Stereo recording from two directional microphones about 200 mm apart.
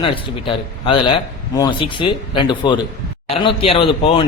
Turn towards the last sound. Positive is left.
turn(degrees=25)  # may be behind; listen again after turning